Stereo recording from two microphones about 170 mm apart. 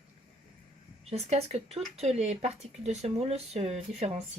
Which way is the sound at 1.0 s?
40° right (ahead or behind).